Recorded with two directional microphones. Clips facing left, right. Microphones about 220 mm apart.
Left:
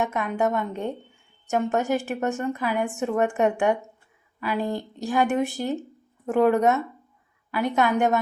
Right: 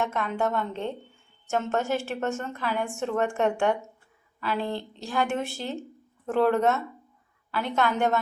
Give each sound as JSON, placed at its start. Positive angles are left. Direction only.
{"t": 0.0, "sound": "a woman's voice", "side_deg": 15}